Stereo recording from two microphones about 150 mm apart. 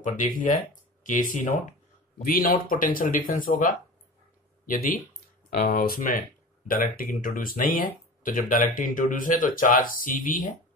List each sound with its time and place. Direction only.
0.0 s speech: 60° left (ahead or behind)
4.6 s speech: 75° left (ahead or behind)